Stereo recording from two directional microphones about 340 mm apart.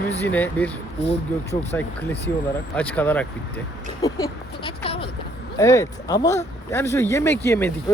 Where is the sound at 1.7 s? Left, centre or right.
Centre.